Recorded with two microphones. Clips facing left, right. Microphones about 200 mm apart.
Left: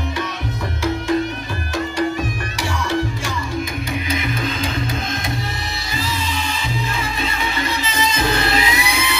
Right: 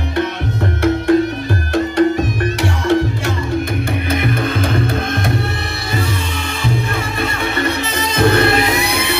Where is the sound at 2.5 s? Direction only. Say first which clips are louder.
Right 5 dB; 60° right (ahead or behind).